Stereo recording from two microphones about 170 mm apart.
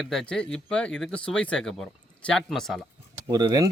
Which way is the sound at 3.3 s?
25° right (ahead or behind).